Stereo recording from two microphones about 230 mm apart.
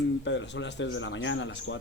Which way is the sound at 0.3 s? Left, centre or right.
Left.